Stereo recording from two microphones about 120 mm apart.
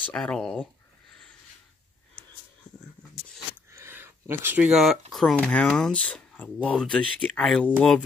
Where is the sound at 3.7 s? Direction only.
20° right (ahead or behind); by 5.0 s centre (ahead or behind).